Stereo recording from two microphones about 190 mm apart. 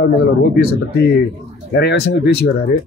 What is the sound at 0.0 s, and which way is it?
Speech, 55° left (ahead or behind).